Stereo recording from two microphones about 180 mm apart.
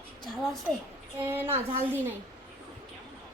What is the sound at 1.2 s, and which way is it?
Speech, 10° right (ahead or behind).